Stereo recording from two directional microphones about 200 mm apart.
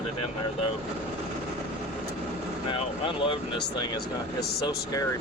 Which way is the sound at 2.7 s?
25° left (ahead or behind).